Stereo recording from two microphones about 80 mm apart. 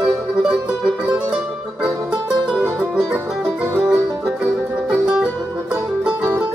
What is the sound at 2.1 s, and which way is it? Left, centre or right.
Music, centre.